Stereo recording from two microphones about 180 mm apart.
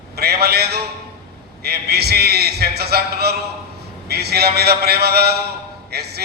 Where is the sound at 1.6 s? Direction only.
60° right (ahead or behind).